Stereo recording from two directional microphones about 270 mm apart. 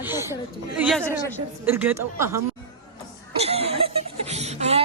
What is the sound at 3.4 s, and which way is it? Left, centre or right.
Chuckle, right.